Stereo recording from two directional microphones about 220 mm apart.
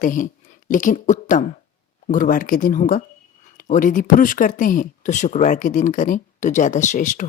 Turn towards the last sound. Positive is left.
turn(degrees=35)  # may be behind; listen again after turning